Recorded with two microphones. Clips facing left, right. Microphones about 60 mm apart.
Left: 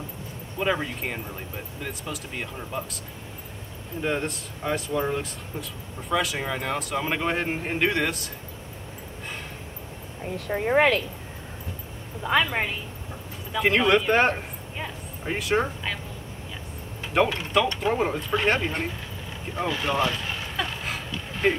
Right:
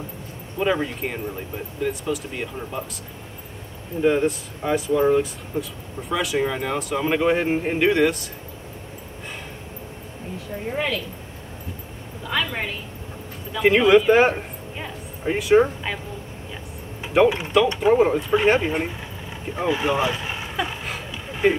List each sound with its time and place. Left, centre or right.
0.6 s speech: centre
4.0 s speech: centre
10.3 s speech: left
12.2 s a woman's voice: left
13.5 s speech: centre
17.0 s mechanisms: centre
17.6 s speech: centre
20.8 s a sound: centre